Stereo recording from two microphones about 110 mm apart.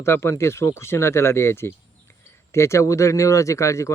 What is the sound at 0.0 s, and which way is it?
Speech, 25° left (ahead or behind).